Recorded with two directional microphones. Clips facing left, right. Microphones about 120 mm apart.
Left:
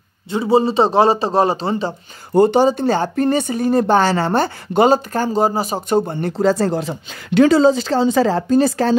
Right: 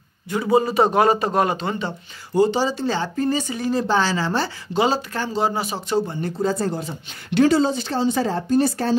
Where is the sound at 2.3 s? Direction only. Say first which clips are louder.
Left 6 dB; 55° left (ahead or behind).